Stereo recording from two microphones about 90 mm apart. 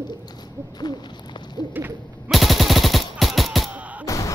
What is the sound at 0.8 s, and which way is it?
Hoot, 50° left (ahead or behind).